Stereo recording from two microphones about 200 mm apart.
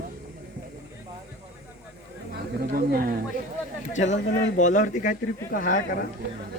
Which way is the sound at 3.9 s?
35° left (ahead or behind).